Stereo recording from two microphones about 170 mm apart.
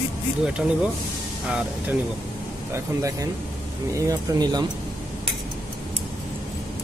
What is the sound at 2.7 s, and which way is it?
A man's voice, 20° right (ahead or behind).